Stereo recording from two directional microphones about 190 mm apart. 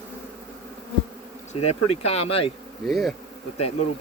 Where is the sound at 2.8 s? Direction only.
Centre (ahead or behind).